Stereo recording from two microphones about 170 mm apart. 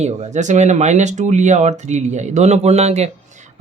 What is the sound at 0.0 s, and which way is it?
Speech, 40° right (ahead or behind).